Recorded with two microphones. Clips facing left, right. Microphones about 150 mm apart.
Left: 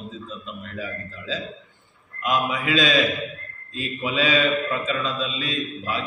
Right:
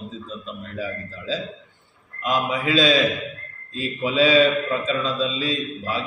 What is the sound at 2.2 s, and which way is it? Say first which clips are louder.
Speech: right 1 dB; 30° right (ahead or behind).